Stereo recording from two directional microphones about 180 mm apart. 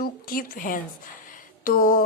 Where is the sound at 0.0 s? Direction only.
55° left (ahead or behind).